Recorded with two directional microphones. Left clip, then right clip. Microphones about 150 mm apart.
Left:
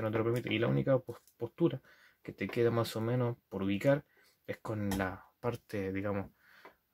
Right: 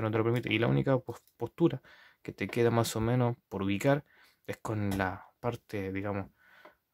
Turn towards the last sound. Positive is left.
turn(degrees=-25)  # may be behind; listen again after turning